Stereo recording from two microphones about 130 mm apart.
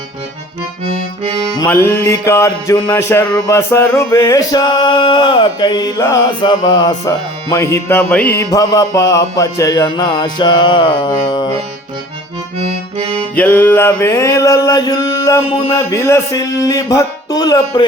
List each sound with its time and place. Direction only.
1.5 s male singing: 20° left (ahead or behind)
8.4 s music: 25° left (ahead or behind)
13.3 s male singing: 15° left (ahead or behind); by 17.8 s 30° left (ahead or behind)